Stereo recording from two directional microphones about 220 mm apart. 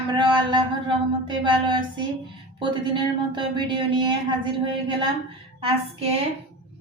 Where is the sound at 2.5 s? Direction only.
20° right (ahead or behind).